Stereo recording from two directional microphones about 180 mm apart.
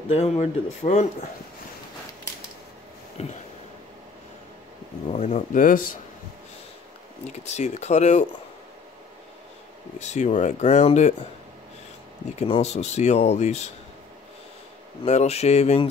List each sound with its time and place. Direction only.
0.1 s speech: 35° left (ahead or behind)
3.2 s speech: 35° left (ahead or behind)
5.1 s speech: 40° left (ahead or behind)
7.2 s speech: 40° left (ahead or behind)
9.9 s speech: 40° left (ahead or behind)
12.4 s speech: 35° left (ahead or behind)
15.0 s speech: 35° left (ahead or behind)